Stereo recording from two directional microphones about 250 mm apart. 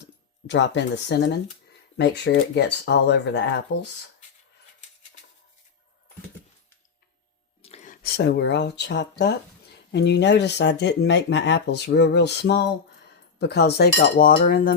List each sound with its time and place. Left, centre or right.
0.0 s speech: left
7.6 s a sound: left
8.0 s speech: left
13.4 s cutlery: left